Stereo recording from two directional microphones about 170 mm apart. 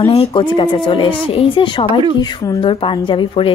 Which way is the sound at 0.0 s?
35° left (ahead or behind).